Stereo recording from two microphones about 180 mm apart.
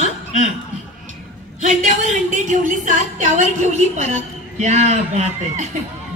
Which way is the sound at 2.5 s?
45° right (ahead or behind).